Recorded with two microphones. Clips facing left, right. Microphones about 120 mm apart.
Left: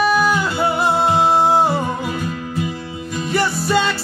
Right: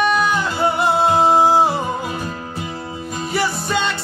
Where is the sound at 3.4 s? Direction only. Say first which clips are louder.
Left 3 dB; centre (ahead or behind).